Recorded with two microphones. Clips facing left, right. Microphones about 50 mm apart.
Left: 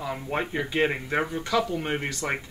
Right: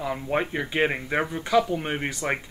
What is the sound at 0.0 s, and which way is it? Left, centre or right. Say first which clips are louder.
Speech: right 3 dB; centre.